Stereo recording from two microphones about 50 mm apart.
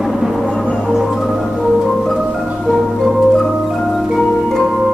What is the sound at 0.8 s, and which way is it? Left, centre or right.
Music, centre.